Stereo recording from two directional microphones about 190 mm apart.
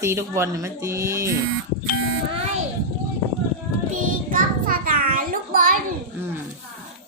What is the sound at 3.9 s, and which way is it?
Child singing, 45° right (ahead or behind).